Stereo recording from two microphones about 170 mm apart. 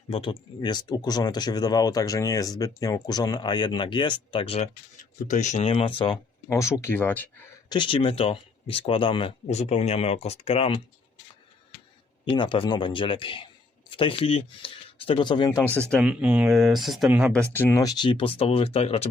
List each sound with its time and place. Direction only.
0.1 s speech: 30° left (ahead or behind)
6.5 s speech: 15° left (ahead or behind)
7.7 s speech: 30° left (ahead or behind)
12.2 s speech: 30° left (ahead or behind)
15.9 s speech: 5° right (ahead or behind)
17.3 s speech: 10° left (ahead or behind); by 19.0 s 35° left (ahead or behind)